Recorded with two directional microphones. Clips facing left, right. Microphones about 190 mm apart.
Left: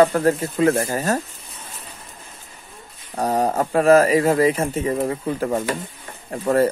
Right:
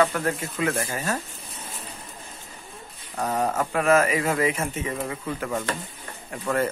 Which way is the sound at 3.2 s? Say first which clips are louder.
Left 5 dB; 35° left (ahead or behind).